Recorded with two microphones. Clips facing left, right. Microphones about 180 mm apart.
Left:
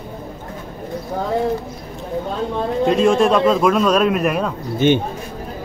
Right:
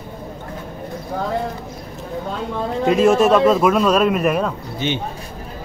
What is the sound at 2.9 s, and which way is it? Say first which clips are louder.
A man's voice: right 2 dB; 5° right (ahead or behind).